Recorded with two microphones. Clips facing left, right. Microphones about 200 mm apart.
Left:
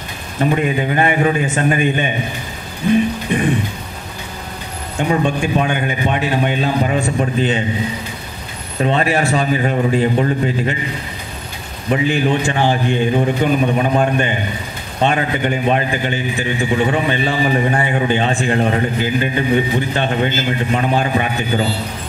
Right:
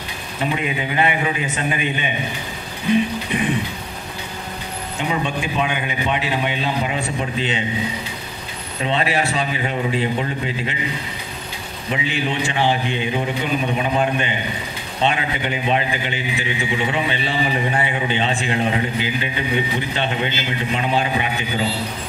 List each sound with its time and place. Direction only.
0.4 s a man's voice: 45° left (ahead or behind)
4.9 s a man's voice: 45° left (ahead or behind)
8.8 s a man's voice: 45° left (ahead or behind)
11.9 s a man's voice: 45° left (ahead or behind)